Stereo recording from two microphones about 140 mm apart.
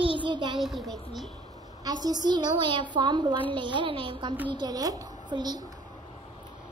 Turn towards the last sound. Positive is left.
turn(degrees=-30)  # may be behind; listen again after turning